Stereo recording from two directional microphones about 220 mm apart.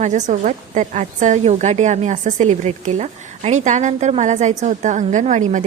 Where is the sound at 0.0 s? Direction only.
35° right (ahead or behind).